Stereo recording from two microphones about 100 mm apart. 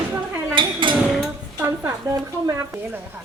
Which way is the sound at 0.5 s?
55° right (ahead or behind).